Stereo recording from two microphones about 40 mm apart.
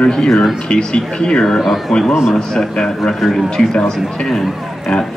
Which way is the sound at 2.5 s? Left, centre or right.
Centre.